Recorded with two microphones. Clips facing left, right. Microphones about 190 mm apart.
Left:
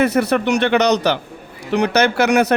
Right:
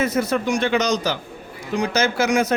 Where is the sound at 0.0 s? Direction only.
65° left (ahead or behind).